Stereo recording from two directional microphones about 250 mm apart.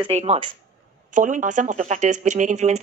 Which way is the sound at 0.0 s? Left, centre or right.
Right.